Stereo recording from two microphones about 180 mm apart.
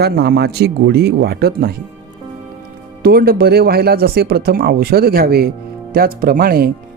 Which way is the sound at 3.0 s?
60° right (ahead or behind).